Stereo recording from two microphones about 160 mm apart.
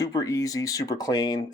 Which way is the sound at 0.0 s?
20° left (ahead or behind).